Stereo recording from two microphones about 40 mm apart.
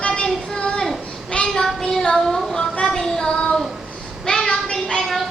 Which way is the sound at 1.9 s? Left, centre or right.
Centre.